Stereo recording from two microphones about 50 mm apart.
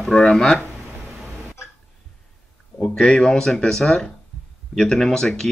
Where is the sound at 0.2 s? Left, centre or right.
Centre.